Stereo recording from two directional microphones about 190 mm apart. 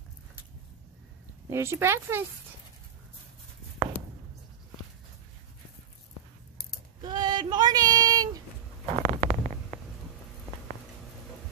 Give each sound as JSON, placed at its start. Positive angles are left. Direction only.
{"t": 1.5, "sound": "speech", "side_deg": -15}
{"t": 7.0, "sound": "child singing", "side_deg": -25}
{"t": 8.8, "sound": "stomach rumble", "side_deg": -35}